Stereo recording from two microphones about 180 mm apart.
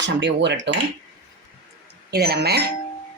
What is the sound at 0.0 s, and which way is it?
Speech, 80° right.